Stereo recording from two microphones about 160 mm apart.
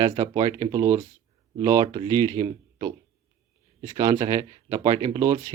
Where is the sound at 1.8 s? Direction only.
30° right (ahead or behind).